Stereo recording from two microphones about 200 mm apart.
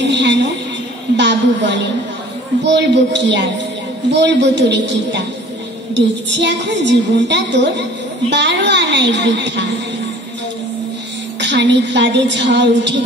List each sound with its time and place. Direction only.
0.0 s a sound: 60° right (ahead or behind)
1.1 s a woman's voice: 60° right (ahead or behind)
11.3 s a woman's voice: 60° right (ahead or behind)